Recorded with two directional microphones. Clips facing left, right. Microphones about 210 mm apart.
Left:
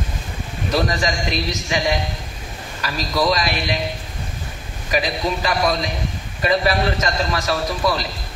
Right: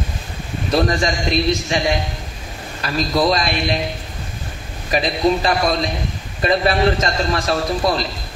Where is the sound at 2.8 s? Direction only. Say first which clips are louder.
Right 3 dB; 35° right (ahead or behind).